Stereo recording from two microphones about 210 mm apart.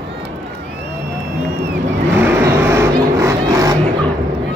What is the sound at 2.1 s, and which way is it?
Vehicle, 10° right (ahead or behind).